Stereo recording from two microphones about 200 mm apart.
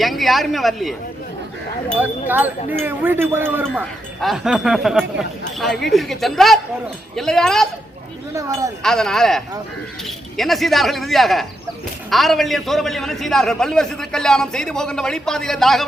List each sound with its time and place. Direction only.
0.0 s a man's voice: centre (ahead or behind)
2.0 s a man's voice: 10° right (ahead or behind)
8.3 s speech: 15° right (ahead or behind)
8.8 s a man's voice: 5° left (ahead or behind)